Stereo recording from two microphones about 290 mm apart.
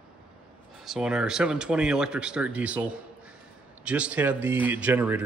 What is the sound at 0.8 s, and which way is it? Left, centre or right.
Speech, centre.